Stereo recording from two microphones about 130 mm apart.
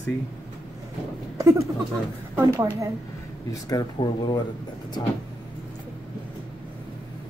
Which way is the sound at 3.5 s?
25° left (ahead or behind).